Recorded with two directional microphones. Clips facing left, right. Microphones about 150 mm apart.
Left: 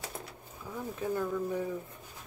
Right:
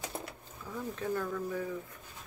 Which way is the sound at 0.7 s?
10° left (ahead or behind).